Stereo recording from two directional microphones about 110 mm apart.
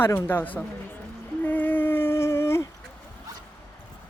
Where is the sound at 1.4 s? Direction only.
15° left (ahead or behind).